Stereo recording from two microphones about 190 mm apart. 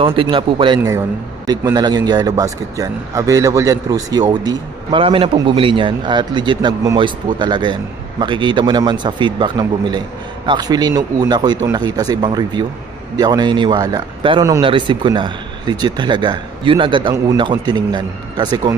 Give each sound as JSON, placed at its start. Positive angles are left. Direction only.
{"t": 0.0, "sound": "speech", "side_deg": -25}
{"t": 0.7, "sound": "a man's voice", "side_deg": -15}